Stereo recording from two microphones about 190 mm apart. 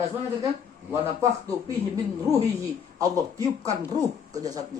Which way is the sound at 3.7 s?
20° right (ahead or behind).